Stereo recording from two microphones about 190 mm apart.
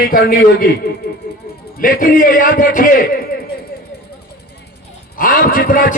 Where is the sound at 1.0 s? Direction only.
60° left (ahead or behind).